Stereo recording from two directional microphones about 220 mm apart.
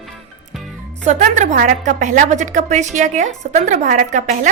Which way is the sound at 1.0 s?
35° right (ahead or behind).